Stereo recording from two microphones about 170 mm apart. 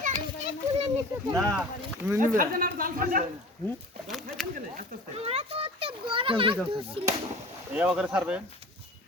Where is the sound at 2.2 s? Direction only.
55° right (ahead or behind).